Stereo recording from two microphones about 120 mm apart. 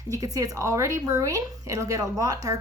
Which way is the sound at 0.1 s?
30° right (ahead or behind).